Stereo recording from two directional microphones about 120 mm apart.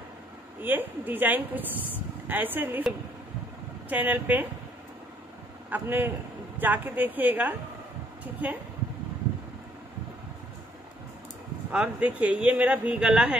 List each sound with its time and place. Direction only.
0.6 s speech: 15° right (ahead or behind)
3.9 s speech: 15° right (ahead or behind)
5.7 s speech: 15° right (ahead or behind)
11.7 s speech: 10° right (ahead or behind)